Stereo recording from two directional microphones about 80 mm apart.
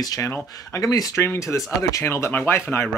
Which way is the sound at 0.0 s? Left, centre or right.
Left.